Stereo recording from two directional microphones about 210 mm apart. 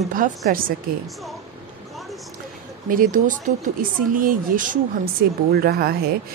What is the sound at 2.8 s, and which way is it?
A woman's voice, 40° right (ahead or behind).